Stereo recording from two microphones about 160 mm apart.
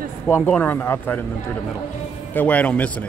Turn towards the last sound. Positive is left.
turn(degrees=10)  # may be behind; listen again after turning